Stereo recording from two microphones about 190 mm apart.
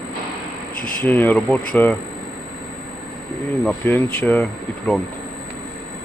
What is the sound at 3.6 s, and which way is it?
Speech, 10° left (ahead or behind).